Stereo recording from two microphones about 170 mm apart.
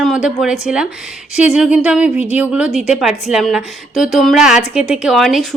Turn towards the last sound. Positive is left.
turn(degrees=0)  # may be behind; listen again after turning